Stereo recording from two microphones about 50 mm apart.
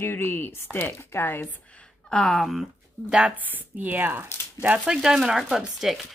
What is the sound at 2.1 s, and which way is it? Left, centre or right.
Speech, centre.